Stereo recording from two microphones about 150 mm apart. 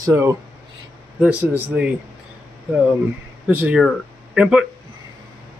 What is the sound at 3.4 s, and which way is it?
Speech, 10° right (ahead or behind).